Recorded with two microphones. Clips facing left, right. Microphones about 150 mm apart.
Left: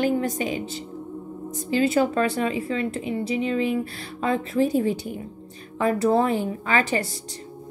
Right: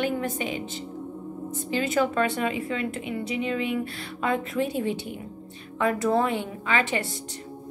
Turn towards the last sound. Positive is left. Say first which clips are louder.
# left 3 dB
turn(degrees=35)  # may be behind; listen again after turning